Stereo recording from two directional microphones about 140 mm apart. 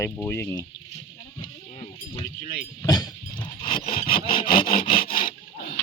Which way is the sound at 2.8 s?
30° left (ahead or behind).